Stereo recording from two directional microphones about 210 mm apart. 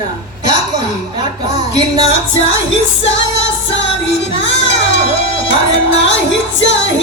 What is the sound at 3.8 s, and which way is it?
Music, 60° left (ahead or behind).